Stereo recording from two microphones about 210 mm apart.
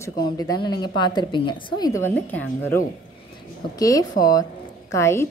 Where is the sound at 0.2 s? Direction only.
20° left (ahead or behind).